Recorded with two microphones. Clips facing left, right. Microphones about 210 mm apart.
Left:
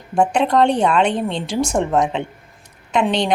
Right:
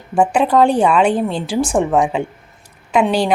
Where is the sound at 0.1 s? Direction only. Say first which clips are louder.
Right 2 dB; 5° right (ahead or behind).